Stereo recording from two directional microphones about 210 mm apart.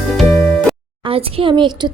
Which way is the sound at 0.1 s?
Centre (ahead or behind).